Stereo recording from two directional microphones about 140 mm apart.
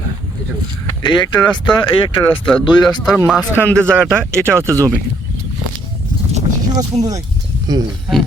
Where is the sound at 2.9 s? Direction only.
25° left (ahead or behind).